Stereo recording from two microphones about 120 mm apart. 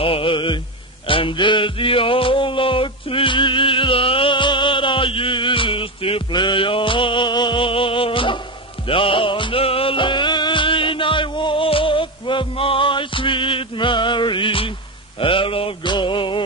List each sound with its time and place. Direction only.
0.0 s mantra: 50° left (ahead or behind)
1.0 s music: 45° left (ahead or behind)
15.1 s a sound: 45° left (ahead or behind)